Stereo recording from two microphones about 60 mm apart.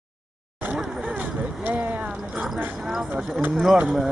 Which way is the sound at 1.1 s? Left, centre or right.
Right.